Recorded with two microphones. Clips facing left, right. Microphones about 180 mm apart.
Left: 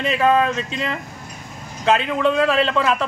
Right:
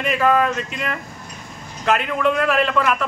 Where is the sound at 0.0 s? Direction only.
25° left (ahead or behind).